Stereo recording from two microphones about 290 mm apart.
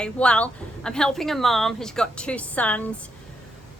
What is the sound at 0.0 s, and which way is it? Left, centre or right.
A woman's voice, centre.